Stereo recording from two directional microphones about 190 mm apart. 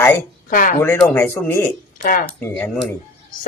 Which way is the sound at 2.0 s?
45° left (ahead or behind).